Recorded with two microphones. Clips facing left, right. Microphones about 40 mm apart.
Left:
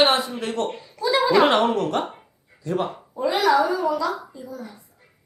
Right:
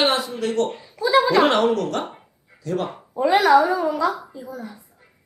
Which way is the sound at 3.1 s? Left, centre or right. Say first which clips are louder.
Right 4 dB; right.